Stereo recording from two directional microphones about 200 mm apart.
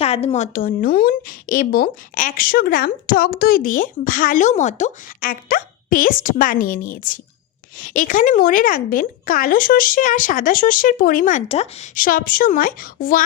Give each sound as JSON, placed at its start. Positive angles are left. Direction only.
{"t": 0.0, "sound": "a woman's voice", "side_deg": 30}